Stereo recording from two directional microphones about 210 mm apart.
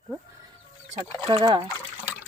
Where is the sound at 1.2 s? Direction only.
20° right (ahead or behind).